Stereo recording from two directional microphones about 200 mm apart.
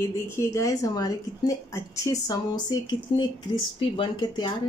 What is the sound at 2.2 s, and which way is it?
Speech, 20° left (ahead or behind).